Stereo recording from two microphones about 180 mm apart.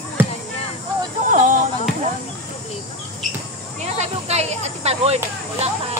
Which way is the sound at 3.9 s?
35° right (ahead or behind).